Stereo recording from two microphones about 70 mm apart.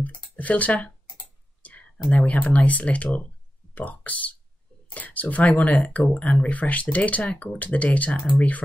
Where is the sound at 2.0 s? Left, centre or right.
Centre.